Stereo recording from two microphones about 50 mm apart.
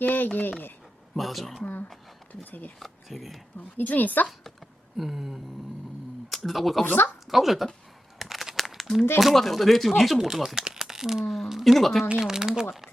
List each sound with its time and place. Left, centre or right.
0.0 s a sound: left
1.1 s speech: centre
2.3 s a woman's voice: left
2.7 s speech: centre
3.8 s a woman's voice: left
4.9 s speech: centre
6.8 s speech: left
7.3 s speech: centre
8.2 s a sound: centre
9.2 s speech: centre
10.6 s a sound: centre
11.4 s speech: centre
12.2 s speech: centre